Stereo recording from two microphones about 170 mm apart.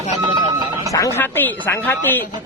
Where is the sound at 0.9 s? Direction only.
20° left (ahead or behind).